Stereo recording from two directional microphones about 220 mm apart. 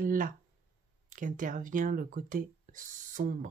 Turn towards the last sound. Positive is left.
turn(degrees=-35)  # may be behind; listen again after turning